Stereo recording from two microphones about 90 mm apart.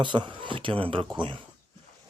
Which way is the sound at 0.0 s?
60° right (ahead or behind).